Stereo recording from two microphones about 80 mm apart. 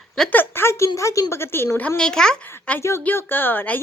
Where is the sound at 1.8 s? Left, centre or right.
Centre.